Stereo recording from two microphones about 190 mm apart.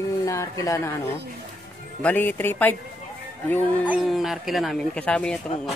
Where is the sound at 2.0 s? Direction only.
10° left (ahead or behind).